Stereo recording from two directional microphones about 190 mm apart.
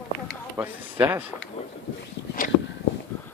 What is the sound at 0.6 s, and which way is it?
Speech, 10° right (ahead or behind).